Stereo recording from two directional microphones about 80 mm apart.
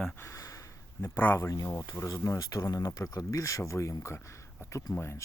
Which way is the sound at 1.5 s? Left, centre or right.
Left.